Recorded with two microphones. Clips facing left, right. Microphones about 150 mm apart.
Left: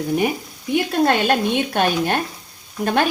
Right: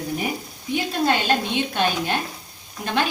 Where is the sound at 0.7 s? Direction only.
55° left (ahead or behind).